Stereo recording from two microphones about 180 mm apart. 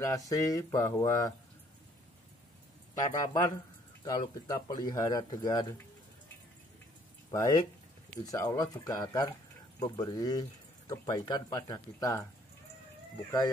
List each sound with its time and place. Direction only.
0.0 s speech: 20° left (ahead or behind)
3.0 s speech: 20° left (ahead or behind)
7.2 s speech: 20° left (ahead or behind)